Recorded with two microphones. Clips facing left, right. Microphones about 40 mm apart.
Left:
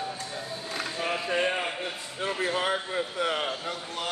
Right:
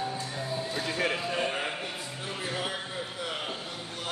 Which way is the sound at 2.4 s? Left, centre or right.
Left.